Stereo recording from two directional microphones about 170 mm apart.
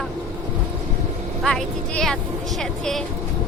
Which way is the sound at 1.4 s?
Centre (ahead or behind).